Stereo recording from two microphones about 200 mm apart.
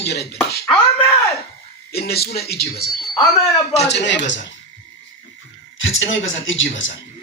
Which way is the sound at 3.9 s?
65° left (ahead or behind).